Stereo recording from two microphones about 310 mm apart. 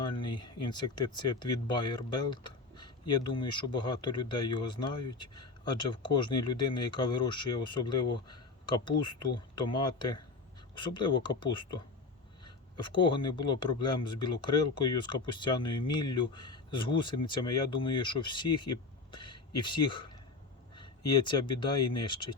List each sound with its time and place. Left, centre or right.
0.0 s speech: centre
12.7 s speech: centre
21.2 s speech: centre